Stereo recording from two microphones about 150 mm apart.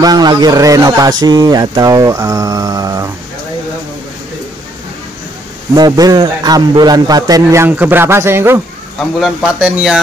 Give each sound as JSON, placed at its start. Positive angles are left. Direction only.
{"t": 0.0, "sound": "speech", "side_deg": -25}
{"t": 5.8, "sound": "speech", "side_deg": -25}
{"t": 9.2, "sound": "speech", "side_deg": -5}